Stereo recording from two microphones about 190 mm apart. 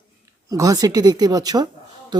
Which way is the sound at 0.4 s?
20° right (ahead or behind).